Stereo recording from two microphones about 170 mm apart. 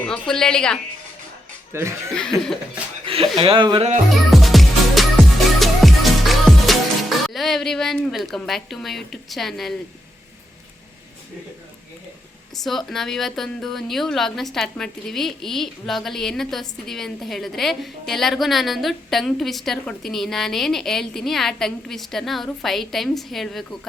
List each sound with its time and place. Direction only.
0.0 s a woman's voice: 5° left (ahead or behind)
1.7 s speech: 15° right (ahead or behind)
2.1 s a woman's voice: 5° left (ahead or behind)
3.1 s speech: 30° right (ahead or behind)
4.3 s music: centre (ahead or behind)
12.5 s a woman's voice: centre (ahead or behind)